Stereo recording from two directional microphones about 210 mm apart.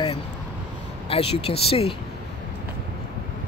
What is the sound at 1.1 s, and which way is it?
Speech, 25° left (ahead or behind).